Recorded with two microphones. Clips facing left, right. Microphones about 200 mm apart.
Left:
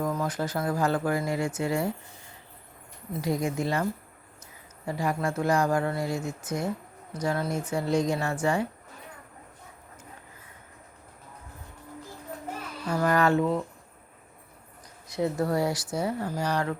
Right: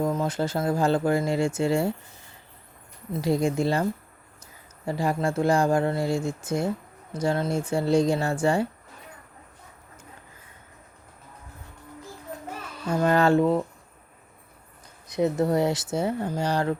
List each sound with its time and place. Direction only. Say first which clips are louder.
0.0 s speech: right 3 dB; 25° right (ahead or behind)
3.1 s speech: right 4 dB; 30° right (ahead or behind)
4.9 s speech: right 3 dB; 30° right (ahead or behind)
12.9 s speech: right 3 dB; 25° right (ahead or behind)
15.0 s speech: right 4 dB; 20° right (ahead or behind)